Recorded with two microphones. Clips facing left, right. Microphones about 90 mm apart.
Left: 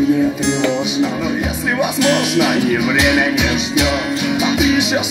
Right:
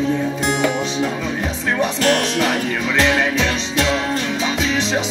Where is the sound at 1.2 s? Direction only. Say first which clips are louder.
Left 4 dB; 10° left (ahead or behind).